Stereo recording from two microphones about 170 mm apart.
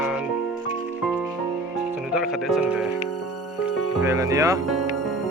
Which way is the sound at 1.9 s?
5° right (ahead or behind).